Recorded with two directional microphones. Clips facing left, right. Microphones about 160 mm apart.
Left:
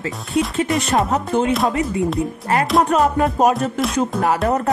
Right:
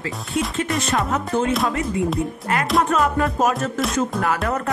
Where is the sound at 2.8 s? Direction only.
30° left (ahead or behind).